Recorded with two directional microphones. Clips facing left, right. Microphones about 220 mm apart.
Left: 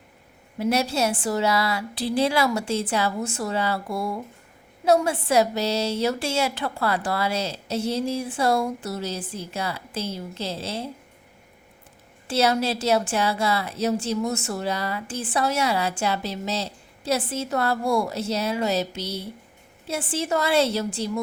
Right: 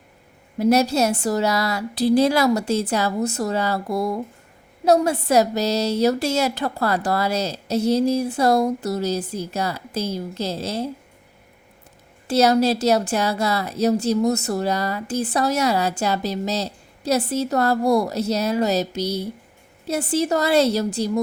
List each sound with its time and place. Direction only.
0.6 s a woman's voice: 40° right (ahead or behind)
12.3 s a woman's voice: 40° right (ahead or behind)